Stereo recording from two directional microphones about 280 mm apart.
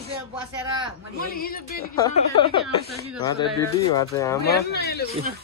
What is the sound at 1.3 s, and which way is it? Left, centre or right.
Speech, left.